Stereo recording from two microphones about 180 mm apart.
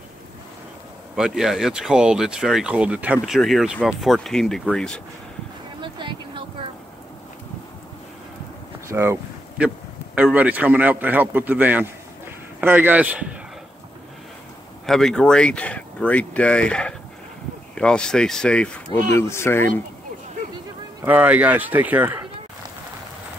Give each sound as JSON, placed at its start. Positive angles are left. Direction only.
{"t": 1.1, "sound": "speech", "side_deg": -5}
{"t": 5.8, "sound": "a sound", "side_deg": -25}
{"t": 8.9, "sound": "a sound", "side_deg": -15}
{"t": 10.1, "sound": "a man's voice", "side_deg": -10}
{"t": 14.9, "sound": "speech", "side_deg": 0}
{"t": 21.0, "sound": "a man's voice", "side_deg": -10}